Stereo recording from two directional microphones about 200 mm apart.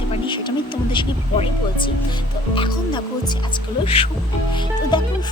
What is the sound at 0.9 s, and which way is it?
Speech, 25° left (ahead or behind).